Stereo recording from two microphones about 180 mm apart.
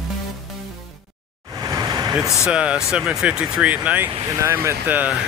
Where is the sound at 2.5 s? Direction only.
5° right (ahead or behind).